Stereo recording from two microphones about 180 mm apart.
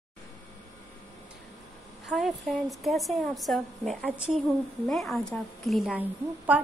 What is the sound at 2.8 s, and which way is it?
A woman's voice, centre (ahead or behind).